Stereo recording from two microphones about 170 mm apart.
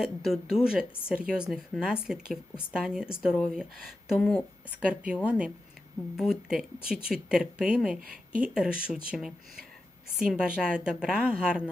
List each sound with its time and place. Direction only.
0.0 s speech: centre (ahead or behind)
4.2 s a woman's voice: 10° left (ahead or behind)
4.9 s a woman's voice: 5° right (ahead or behind)
8.0 s speech: 55° right (ahead or behind)
8.4 s speech: 5° right (ahead or behind)